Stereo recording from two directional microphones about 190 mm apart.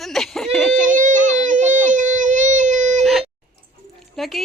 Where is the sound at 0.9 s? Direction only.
40° right (ahead or behind).